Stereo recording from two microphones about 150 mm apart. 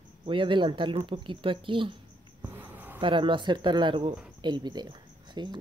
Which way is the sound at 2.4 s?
15° right (ahead or behind).